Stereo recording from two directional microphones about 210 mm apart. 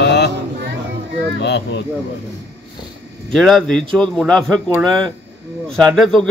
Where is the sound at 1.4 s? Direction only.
55° left (ahead or behind).